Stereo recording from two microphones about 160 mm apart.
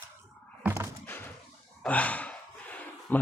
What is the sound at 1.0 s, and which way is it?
Slam, 10° left (ahead or behind).